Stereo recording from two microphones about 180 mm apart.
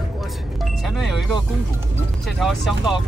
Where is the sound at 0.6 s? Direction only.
Centre (ahead or behind).